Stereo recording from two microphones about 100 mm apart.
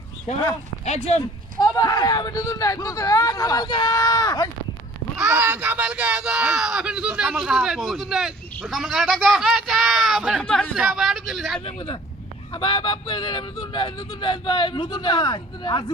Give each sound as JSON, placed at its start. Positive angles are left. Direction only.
{"t": 0.3, "sound": "speech", "side_deg": 90}
{"t": 1.8, "sound": "speech", "side_deg": 40}
{"t": 5.2, "sound": "speech", "side_deg": -25}
{"t": 10.4, "sound": "speech", "side_deg": 10}
{"t": 10.8, "sound": "speech", "side_deg": -5}
{"t": 11.6, "sound": "speech", "side_deg": 70}
{"t": 12.5, "sound": "speech", "side_deg": 55}